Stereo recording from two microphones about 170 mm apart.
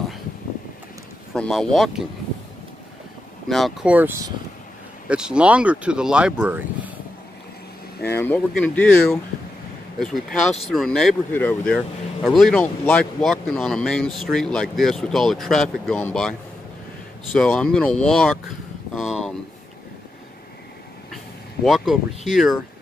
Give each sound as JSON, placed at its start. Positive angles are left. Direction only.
{"t": 1.3, "sound": "speech", "side_deg": 5}
{"t": 3.4, "sound": "speech", "side_deg": 0}
{"t": 8.1, "sound": "speech", "side_deg": 10}
{"t": 17.4, "sound": "speech", "side_deg": 5}
{"t": 18.9, "sound": "a sound", "side_deg": 0}
{"t": 21.6, "sound": "speech", "side_deg": 0}